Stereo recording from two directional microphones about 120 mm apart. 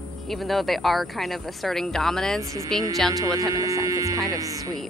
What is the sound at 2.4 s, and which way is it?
Speech, 25° right (ahead or behind).